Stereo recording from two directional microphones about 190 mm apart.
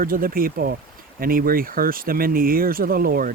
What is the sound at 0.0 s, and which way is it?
Speech, 50° right (ahead or behind).